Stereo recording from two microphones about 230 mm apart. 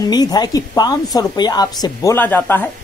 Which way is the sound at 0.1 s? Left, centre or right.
Centre.